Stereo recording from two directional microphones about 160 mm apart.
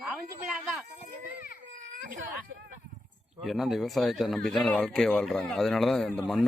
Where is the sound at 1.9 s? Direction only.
55° right (ahead or behind).